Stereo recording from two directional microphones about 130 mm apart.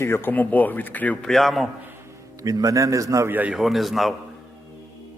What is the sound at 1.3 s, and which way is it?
Speech, centre (ahead or behind).